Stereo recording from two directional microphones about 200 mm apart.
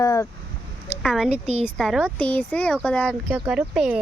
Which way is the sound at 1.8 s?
Centre (ahead or behind).